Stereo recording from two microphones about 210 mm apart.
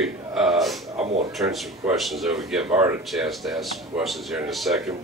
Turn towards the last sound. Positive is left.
turn(degrees=0)  # may be behind; listen again after turning